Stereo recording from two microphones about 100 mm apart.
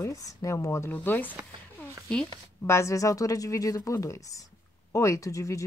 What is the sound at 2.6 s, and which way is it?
A woman's voice, 30° left (ahead or behind).